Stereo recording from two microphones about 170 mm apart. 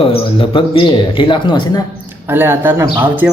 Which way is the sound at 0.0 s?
30° left (ahead or behind).